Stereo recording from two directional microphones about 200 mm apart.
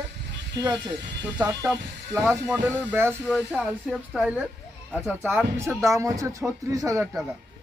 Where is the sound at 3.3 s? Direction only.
Centre (ahead or behind); by 7.1 s 15° right (ahead or behind).